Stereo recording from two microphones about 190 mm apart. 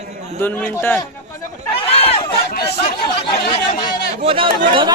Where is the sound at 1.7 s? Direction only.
30° left (ahead or behind).